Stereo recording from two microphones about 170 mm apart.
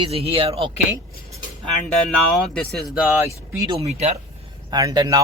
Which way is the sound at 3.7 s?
35° right (ahead or behind).